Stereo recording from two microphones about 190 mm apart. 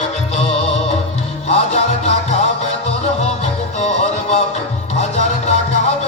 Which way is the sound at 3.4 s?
35° left (ahead or behind).